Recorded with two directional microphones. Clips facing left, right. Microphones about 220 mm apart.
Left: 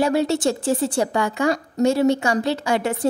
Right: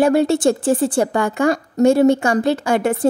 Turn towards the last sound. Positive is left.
turn(degrees=-50)  # may be behind; listen again after turning